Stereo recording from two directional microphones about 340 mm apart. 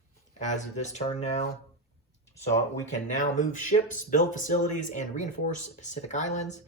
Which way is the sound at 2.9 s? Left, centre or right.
Left.